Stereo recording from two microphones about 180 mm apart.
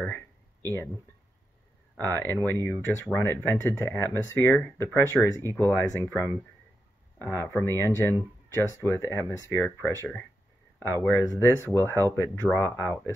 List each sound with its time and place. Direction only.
0.0 s a sound: 10° left (ahead or behind)
2.1 s speech: 10° left (ahead or behind)
11.1 s speech: 15° left (ahead or behind)